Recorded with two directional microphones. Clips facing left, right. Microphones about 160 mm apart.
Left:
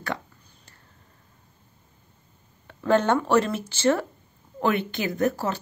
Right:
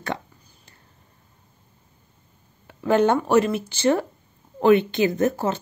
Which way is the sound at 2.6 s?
15° right (ahead or behind).